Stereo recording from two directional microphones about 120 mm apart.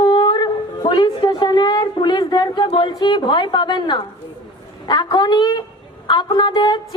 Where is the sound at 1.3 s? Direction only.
35° left (ahead or behind).